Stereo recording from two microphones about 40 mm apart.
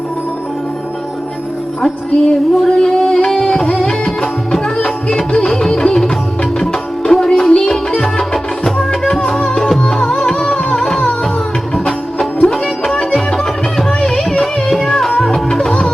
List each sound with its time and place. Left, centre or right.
1.8 s music: centre
7.1 s music: centre
12.5 s music: centre